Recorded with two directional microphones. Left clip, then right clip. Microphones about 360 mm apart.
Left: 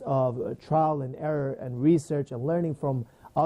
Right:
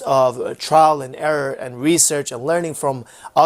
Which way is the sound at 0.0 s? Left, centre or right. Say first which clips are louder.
Right 11 dB; centre.